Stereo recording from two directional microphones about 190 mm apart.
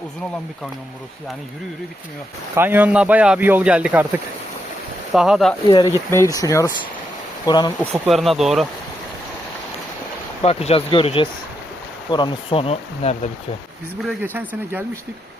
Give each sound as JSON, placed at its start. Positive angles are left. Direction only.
{"t": 2.6, "sound": "speech", "side_deg": -10}
{"t": 5.6, "sound": "speech", "side_deg": 25}
{"t": 6.1, "sound": "speech", "side_deg": 15}
{"t": 7.9, "sound": "speech", "side_deg": 0}
{"t": 10.4, "sound": "speech", "side_deg": 35}
{"t": 14.0, "sound": "speech", "side_deg": -5}